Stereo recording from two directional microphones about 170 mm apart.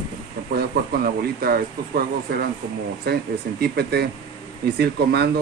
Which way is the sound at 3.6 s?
70° right (ahead or behind).